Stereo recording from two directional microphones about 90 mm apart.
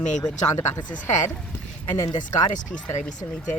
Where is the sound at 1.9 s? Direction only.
40° left (ahead or behind).